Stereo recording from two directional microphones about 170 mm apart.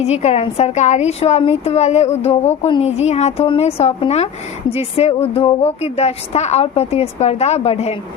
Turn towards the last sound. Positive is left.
turn(degrees=35)  # may be behind; listen again after turning